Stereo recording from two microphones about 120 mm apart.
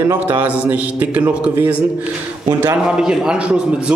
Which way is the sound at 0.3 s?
15° right (ahead or behind).